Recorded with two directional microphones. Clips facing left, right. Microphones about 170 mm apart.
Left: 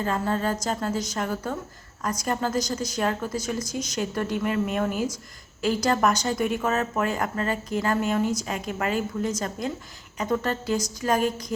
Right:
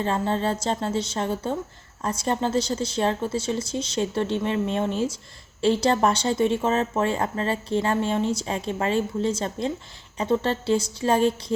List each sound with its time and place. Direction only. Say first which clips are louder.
0.0 s speech: right 1 dB; 25° right (ahead or behind)